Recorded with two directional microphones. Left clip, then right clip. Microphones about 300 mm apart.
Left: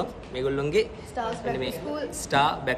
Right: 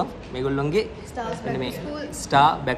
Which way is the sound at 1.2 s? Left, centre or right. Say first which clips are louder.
Even; centre.